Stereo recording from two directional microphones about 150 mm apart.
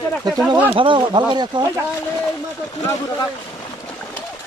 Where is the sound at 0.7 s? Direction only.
35° right (ahead or behind).